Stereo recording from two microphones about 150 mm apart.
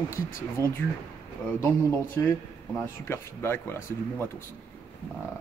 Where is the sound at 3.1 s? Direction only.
15° left (ahead or behind).